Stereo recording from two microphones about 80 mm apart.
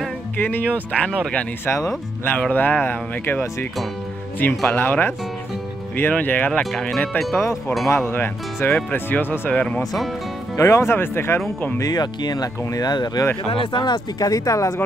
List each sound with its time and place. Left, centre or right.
0.4 s speech: left
2.5 s speech: left
4.6 s speech: left
6.6 s speech: centre
8.1 s speech: left
9.5 s speech: centre
10.5 s speech: left
11.8 s speech: left
13.5 s speech: left